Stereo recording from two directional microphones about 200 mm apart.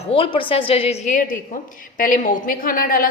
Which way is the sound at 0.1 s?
25° left (ahead or behind).